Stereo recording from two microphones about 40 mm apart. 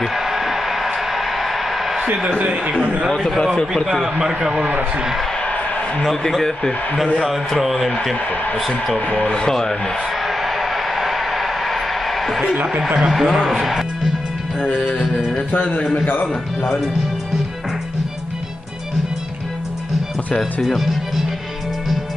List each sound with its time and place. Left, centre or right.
0.0 s a sound: centre
2.8 s a man's voice: right
3.1 s speech: centre
4.0 s a man's voice: right
7.2 s speech: centre
9.0 s speech: left
9.3 s speech: centre
10.2 s a sound: centre
12.8 s speech: centre
15.6 s speech: left
15.9 s a man's voice: left
20.6 s speech: centre